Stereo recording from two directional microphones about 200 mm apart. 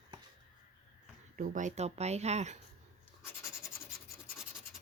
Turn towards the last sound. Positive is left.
turn(degrees=15)  # may be behind; listen again after turning